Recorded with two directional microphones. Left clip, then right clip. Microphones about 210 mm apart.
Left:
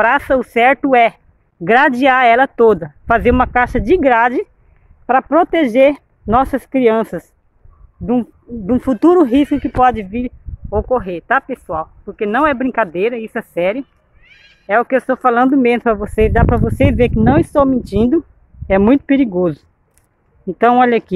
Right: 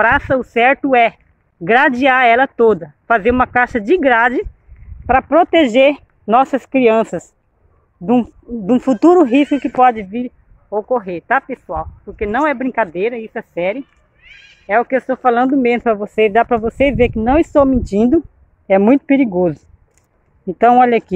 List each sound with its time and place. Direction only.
0.0 s speech: 10° left (ahead or behind)
14.2 s meow: 55° right (ahead or behind)
14.7 s speech: 10° left (ahead or behind)